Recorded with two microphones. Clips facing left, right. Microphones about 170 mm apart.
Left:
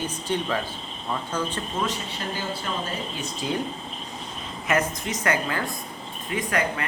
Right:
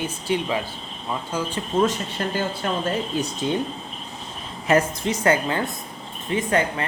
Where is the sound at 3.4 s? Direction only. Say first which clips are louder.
Right 3 dB; 25° right (ahead or behind).